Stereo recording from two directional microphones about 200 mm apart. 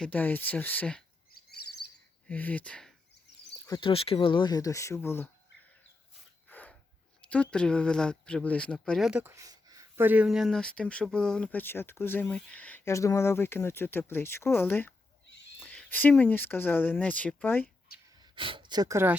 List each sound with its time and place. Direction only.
0.0 s speech: 10° left (ahead or behind)
1.3 s chirp: 50° left (ahead or behind)
2.2 s speech: 10° left (ahead or behind)
3.7 s speech: 25° left (ahead or behind); by 5.3 s 10° left (ahead or behind)
6.5 s a sound: 10° left (ahead or behind)
7.2 s speech: 5° left (ahead or behind)
17.6 s a sound: 50° left (ahead or behind)
18.2 s speech: 25° right (ahead or behind)